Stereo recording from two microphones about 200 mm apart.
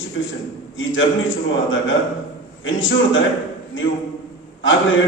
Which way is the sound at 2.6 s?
75° left (ahead or behind).